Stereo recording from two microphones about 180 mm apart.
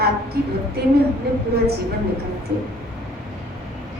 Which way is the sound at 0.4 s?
60° right (ahead or behind).